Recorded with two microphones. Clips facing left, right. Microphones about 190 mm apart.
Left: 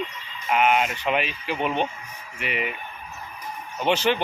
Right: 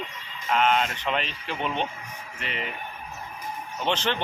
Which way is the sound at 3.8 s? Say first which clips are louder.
Left 5 dB; 10° left (ahead or behind).